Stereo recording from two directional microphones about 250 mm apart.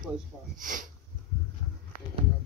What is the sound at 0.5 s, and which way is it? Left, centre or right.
Speech, right.